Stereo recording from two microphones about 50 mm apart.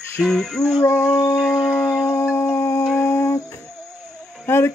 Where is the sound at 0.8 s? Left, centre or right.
Left.